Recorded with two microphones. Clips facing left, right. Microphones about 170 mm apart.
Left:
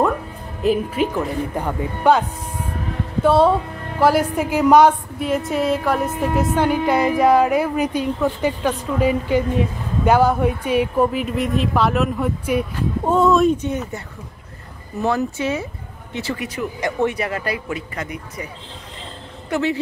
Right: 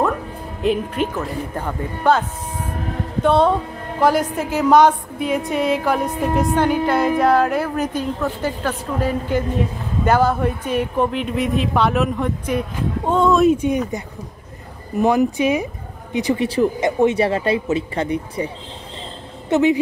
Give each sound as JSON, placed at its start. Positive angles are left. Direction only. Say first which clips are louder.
{"t": 0.7, "sound": "a woman's voice", "louder": "left 1 dB", "side_deg": 5}
{"t": 3.3, "sound": "a woman's voice", "louder": "left 1 dB", "side_deg": 5}
{"t": 16.3, "sound": "speech", "louder": "right 8 dB", "side_deg": -30}
{"t": 19.5, "sound": "a woman's voice", "louder": "right 6 dB", "side_deg": -15}